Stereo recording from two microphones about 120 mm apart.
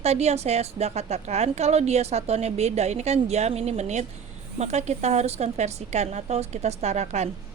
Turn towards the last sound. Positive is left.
turn(degrees=-70)  # may be behind; listen again after turning